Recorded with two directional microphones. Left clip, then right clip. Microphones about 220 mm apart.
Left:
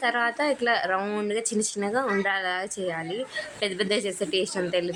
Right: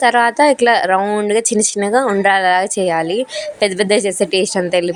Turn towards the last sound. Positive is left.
turn(degrees=-30)  # may be behind; listen again after turning